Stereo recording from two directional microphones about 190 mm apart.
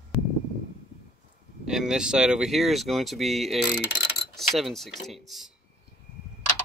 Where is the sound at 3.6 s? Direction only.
60° left (ahead or behind).